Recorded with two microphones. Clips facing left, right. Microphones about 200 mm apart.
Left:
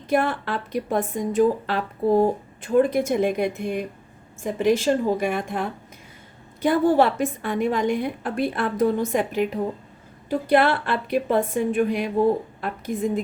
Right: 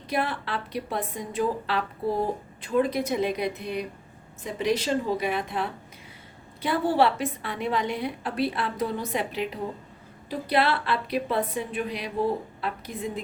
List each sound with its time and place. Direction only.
0.1 s a woman's voice: 50° left (ahead or behind)